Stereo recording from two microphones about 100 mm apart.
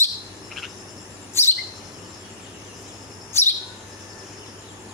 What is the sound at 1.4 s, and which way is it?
Chirp, 25° left (ahead or behind).